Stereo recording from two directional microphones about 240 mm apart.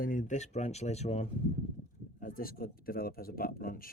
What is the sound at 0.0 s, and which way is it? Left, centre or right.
A man's voice, left.